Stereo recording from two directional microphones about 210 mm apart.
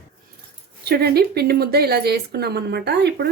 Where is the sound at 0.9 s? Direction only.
50° right (ahead or behind).